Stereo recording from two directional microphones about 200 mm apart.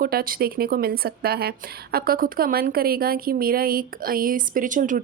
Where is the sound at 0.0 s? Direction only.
45° right (ahead or behind).